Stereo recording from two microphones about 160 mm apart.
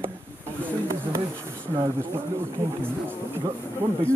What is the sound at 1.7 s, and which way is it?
Speech, 15° right (ahead or behind).